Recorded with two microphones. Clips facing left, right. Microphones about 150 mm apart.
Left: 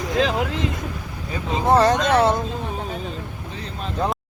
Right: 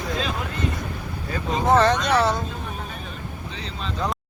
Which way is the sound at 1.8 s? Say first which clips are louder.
Left 3 dB; 45° left (ahead or behind).